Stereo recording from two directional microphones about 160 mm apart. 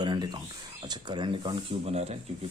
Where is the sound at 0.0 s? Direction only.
30° right (ahead or behind).